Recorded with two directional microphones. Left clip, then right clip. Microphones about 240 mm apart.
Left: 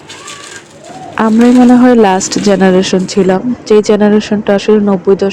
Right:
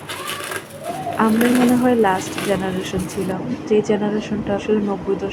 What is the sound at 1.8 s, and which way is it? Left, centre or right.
Speech, left.